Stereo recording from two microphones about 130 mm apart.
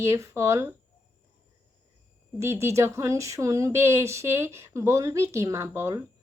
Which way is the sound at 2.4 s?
20° right (ahead or behind).